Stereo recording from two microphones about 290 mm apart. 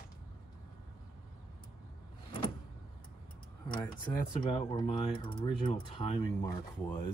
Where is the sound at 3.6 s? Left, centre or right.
Centre.